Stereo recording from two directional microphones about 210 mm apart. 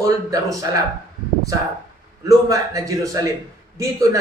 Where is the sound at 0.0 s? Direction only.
15° right (ahead or behind).